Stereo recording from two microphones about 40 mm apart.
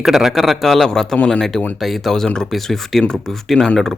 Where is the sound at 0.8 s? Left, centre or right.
Centre.